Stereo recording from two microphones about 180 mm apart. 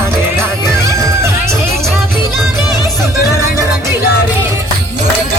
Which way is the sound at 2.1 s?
Centre (ahead or behind).